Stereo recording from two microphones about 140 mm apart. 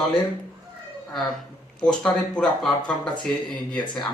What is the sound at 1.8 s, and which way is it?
Speech, 5° left (ahead or behind).